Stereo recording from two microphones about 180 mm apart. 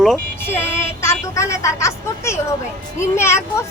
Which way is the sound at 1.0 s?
15° left (ahead or behind).